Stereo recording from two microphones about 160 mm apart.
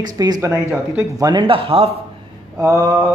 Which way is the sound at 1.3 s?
30° right (ahead or behind).